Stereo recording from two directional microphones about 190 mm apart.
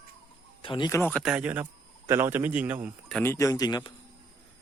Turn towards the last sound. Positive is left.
turn(degrees=20)  # may be behind; listen again after turning